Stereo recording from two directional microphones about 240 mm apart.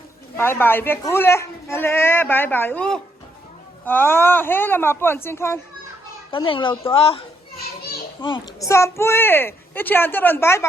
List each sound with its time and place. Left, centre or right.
0.3 s speech: centre
6.5 s a woman's voice: left